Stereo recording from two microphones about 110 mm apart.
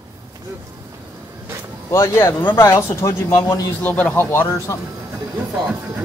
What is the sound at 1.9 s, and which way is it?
Speech, 25° left (ahead or behind).